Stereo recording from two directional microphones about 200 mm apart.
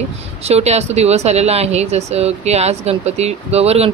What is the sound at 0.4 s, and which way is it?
Speech, 30° right (ahead or behind).